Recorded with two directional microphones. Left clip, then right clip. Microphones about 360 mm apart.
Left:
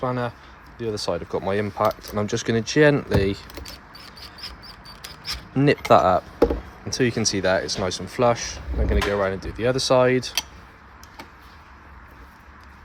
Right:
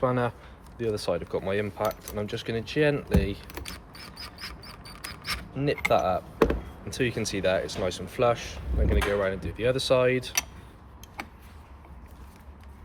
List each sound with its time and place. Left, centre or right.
0.0 s speech: centre
5.5 s speech: centre